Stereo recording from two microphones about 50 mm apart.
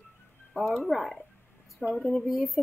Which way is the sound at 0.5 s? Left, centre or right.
Centre.